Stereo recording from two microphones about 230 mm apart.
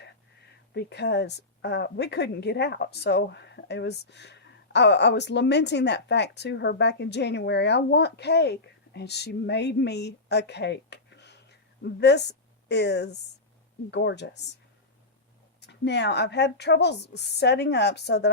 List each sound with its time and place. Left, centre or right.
0.7 s a woman's voice: left
15.6 s speech: left